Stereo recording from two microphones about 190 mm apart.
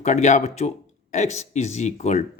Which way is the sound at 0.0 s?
40° left (ahead or behind).